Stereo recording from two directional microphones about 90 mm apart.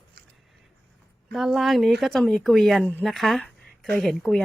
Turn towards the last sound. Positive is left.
turn(degrees=5)  # may be behind; listen again after turning